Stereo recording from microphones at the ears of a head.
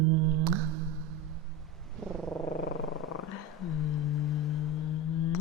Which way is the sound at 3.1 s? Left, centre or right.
Left.